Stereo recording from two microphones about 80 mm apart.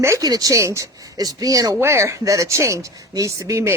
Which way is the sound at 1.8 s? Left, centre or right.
Right.